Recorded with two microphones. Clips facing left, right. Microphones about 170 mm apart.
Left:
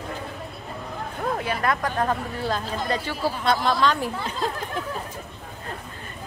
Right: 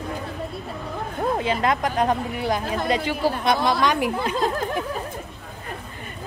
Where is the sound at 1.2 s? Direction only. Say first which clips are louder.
Right 4 dB; 20° right (ahead or behind).